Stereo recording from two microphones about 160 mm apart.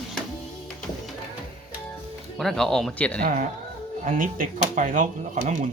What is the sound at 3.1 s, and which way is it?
Speech, 65° right (ahead or behind).